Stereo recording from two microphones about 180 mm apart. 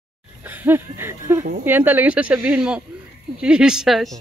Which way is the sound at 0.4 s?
10° right (ahead or behind).